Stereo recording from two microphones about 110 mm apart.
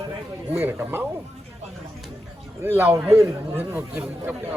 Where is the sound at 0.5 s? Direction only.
20° right (ahead or behind).